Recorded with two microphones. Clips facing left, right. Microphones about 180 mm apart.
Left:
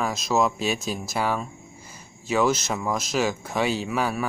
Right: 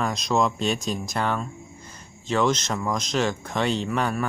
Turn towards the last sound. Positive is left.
turn(degrees=5)  # may be behind; listen again after turning